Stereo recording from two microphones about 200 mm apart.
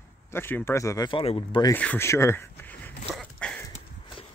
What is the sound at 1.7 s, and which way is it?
Speech, 10° left (ahead or behind).